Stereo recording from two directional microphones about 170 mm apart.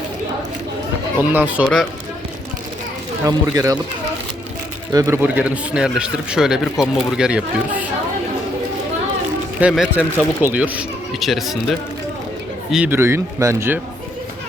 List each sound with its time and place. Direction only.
1.2 s a man's voice: 10° right (ahead or behind)
1.6 s speech: centre (ahead or behind)
3.2 s speech: 20° right (ahead or behind)
4.9 s a man's voice: 20° right (ahead or behind)
9.6 s a man's voice: 5° right (ahead or behind)
12.7 s a man's voice: 10° right (ahead or behind)